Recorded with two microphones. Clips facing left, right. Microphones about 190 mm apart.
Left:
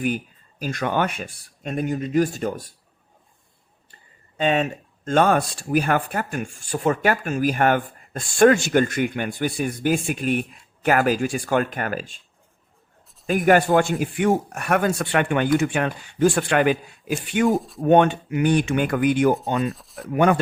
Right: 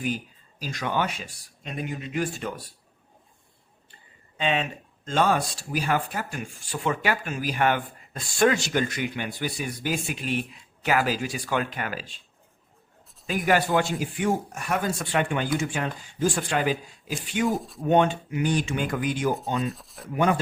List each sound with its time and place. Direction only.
0.6 s speech: 55° left (ahead or behind)
4.4 s speech: 45° left (ahead or behind)
13.2 s speech: 50° left (ahead or behind)
17.5 s speech: centre (ahead or behind)
17.8 s speech: 60° left (ahead or behind)
19.6 s speech: centre (ahead or behind)
20.1 s speech: 60° left (ahead or behind)